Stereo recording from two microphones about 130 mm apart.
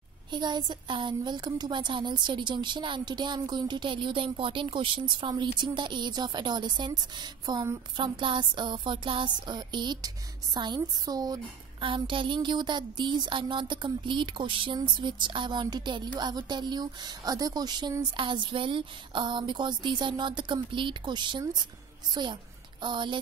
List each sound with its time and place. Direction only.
0.3 s a woman's voice: 35° right (ahead or behind)
11.8 s a woman's voice: 40° right (ahead or behind)